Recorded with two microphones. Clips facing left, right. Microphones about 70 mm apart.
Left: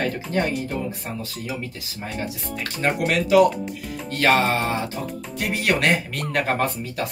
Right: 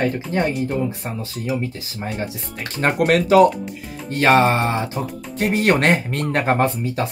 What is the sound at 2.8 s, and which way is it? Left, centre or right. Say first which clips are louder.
Speech: right 5 dB; right.